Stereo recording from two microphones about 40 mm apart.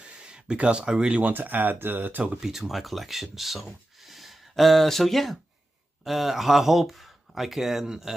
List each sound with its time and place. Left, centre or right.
0.0 s speech: right
1.2 s speech: right
2.4 s speech: centre